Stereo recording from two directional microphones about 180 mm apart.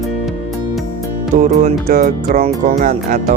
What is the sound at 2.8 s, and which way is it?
Speech, 45° right (ahead or behind).